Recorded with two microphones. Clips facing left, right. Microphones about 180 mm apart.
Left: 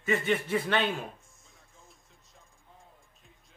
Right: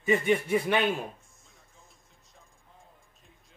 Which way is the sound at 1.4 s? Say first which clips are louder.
Even; centre (ahead or behind).